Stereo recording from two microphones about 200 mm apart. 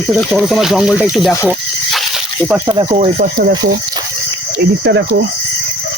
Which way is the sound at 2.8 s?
30° right (ahead or behind).